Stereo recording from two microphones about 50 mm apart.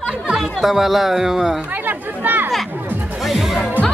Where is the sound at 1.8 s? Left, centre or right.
Right.